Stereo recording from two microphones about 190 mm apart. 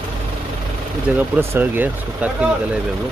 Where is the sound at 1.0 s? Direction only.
10° right (ahead or behind).